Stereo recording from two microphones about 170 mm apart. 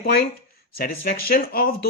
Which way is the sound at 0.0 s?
60° left (ahead or behind).